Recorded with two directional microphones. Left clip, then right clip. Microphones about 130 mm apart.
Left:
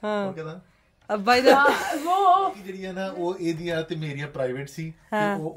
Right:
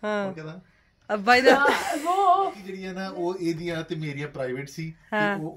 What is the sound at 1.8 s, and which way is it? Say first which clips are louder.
Speech: left 1 dB; 90° right.